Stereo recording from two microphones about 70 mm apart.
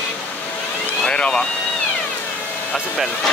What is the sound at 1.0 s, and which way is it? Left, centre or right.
Speech, centre.